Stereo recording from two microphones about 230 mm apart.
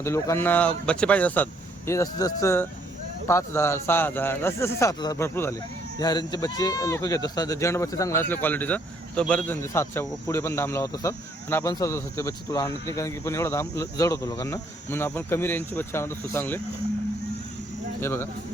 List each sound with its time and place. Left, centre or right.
0.0 s a man's voice: centre
18.0 s a man's voice: centre